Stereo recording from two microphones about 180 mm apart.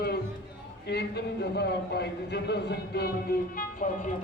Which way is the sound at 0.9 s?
65° left (ahead or behind).